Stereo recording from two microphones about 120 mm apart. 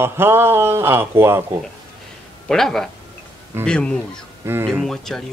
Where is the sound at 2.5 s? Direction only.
5° left (ahead or behind).